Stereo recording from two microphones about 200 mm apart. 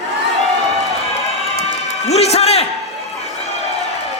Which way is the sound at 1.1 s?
30° left (ahead or behind).